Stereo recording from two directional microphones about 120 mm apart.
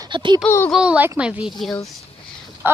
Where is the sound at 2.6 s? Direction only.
20° right (ahead or behind).